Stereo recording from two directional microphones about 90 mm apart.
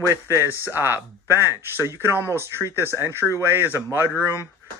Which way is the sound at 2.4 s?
25° right (ahead or behind).